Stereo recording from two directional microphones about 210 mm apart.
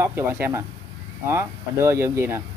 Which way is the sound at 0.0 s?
10° right (ahead or behind).